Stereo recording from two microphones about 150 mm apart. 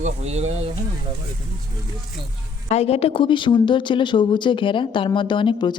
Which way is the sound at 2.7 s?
45° left (ahead or behind).